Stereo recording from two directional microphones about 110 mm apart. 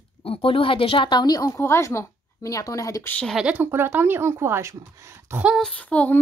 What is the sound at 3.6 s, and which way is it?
Speech, 20° right (ahead or behind).